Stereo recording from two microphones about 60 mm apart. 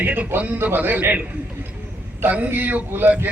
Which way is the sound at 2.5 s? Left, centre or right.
Right.